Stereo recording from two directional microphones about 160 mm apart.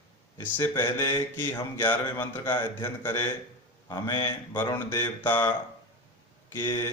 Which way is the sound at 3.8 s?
25° left (ahead or behind).